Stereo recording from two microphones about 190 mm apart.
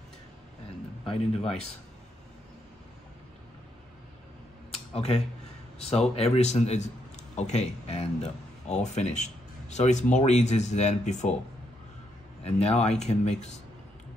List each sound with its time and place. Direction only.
1.0 s speech: 30° left (ahead or behind)
4.7 s a sound: 35° left (ahead or behind)
5.8 s speech: 35° left (ahead or behind)
12.4 s speech: 35° left (ahead or behind)